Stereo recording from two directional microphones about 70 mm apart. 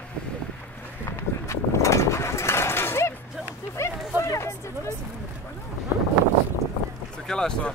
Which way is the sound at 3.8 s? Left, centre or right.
Left.